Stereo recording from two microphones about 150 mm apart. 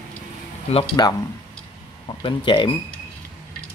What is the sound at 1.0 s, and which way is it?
Speech, 25° left (ahead or behind).